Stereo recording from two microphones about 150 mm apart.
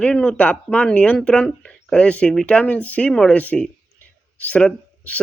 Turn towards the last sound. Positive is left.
turn(degrees=10)  # may be behind; listen again after turning